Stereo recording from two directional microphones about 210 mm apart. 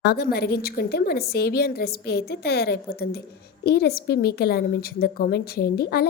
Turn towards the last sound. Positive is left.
turn(degrees=50)  # may be behind; listen again after turning